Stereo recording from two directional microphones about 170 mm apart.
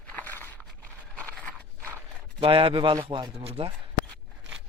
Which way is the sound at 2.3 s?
30° right (ahead or behind).